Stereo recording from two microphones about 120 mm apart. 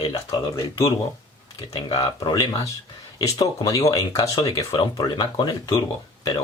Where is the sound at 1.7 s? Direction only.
30° left (ahead or behind).